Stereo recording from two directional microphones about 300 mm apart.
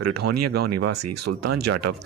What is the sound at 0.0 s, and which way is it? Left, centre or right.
Speech, right.